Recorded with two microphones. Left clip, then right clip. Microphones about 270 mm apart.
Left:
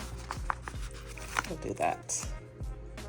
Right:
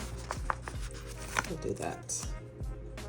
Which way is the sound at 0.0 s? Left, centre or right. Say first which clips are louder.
Right 1 dB; centre.